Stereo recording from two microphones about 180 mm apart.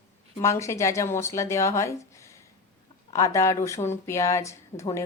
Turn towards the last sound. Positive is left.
turn(degrees=15)  # may be behind; listen again after turning